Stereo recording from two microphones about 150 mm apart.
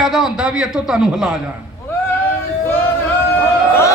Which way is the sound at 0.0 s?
Centre (ahead or behind).